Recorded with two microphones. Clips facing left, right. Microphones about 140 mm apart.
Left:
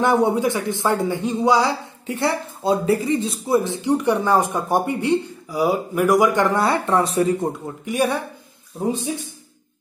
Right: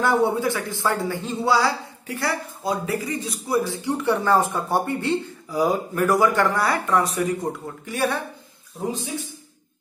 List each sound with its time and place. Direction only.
0.0 s speech: 20° left (ahead or behind)
7.8 s speech: 15° left (ahead or behind)